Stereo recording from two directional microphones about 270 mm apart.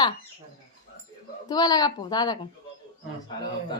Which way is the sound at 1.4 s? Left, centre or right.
Centre.